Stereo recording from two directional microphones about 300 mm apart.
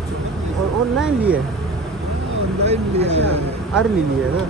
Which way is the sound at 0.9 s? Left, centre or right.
Centre.